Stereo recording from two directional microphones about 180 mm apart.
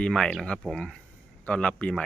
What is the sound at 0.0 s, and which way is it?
Speech, 5° left (ahead or behind).